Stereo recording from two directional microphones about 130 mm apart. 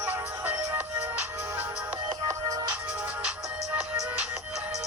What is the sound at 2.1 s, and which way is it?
Music, 25° right (ahead or behind).